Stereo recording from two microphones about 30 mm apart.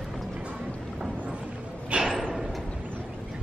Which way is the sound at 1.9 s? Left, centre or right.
Right.